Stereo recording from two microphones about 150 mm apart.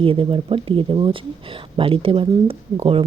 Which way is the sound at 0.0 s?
35° right (ahead or behind).